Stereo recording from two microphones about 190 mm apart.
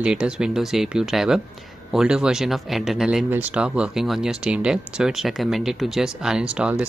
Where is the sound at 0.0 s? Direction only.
5° right (ahead or behind).